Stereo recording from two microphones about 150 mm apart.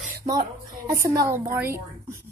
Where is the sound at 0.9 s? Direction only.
20° right (ahead or behind).